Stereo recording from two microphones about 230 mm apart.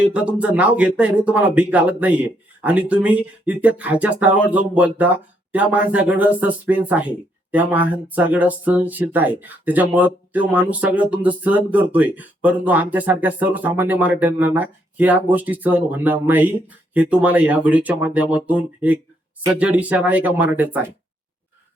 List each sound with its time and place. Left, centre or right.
0.0 s speech: centre